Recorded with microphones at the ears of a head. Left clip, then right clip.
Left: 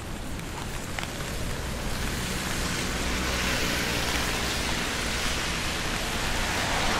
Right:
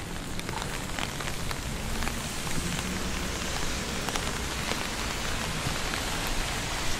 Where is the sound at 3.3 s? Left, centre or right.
Left.